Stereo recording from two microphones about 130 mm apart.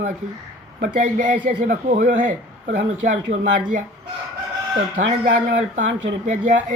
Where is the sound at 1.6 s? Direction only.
80° right.